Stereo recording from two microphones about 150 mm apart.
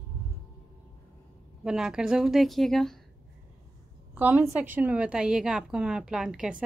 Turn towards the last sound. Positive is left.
turn(degrees=-5)  # may be behind; listen again after turning